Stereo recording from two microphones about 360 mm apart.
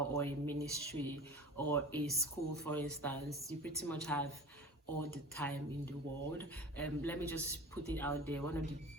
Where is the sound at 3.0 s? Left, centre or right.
Centre.